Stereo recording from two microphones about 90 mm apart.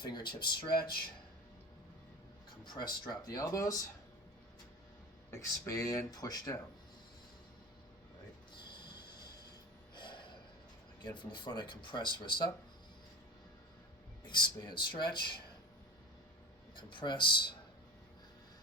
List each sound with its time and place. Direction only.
0.0 s speech: 55° left (ahead or behind)
2.7 s speech: 55° left (ahead or behind)
5.3 s speech: 35° left (ahead or behind)
8.7 s a sound: 55° left (ahead or behind)
9.9 s snort: 60° left (ahead or behind)
11.0 s speech: 60° left (ahead or behind)
14.3 s speech: 55° left (ahead or behind)
16.7 s speech: 60° left (ahead or behind)